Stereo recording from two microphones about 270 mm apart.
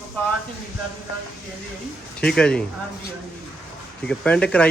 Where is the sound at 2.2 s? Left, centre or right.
Centre.